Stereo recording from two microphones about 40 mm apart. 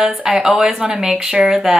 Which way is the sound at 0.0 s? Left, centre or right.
Right.